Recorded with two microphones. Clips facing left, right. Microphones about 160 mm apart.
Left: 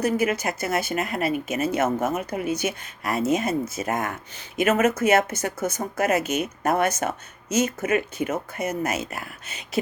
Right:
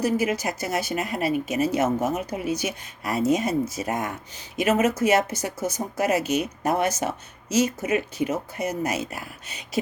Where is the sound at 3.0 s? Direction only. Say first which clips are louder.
Right 1 dB; 35° right (ahead or behind).